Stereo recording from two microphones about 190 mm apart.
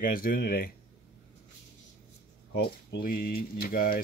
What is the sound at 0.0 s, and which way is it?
Speech, 50° left (ahead or behind).